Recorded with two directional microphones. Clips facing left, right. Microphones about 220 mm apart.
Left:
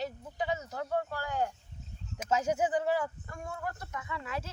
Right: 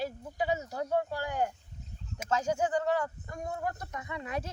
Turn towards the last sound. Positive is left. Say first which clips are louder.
# right 2 dB
turn(degrees=-20)  # may be behind; listen again after turning